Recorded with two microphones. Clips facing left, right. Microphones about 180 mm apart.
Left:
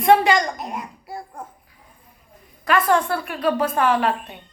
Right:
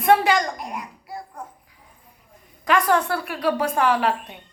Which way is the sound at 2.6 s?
15° right (ahead or behind).